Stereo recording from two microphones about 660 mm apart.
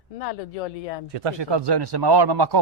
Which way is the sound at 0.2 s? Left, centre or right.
Left.